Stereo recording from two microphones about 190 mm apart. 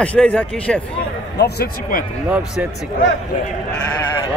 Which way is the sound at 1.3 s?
55° left (ahead or behind).